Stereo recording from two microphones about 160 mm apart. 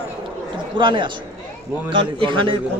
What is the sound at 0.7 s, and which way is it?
A man's voice, 30° right (ahead or behind).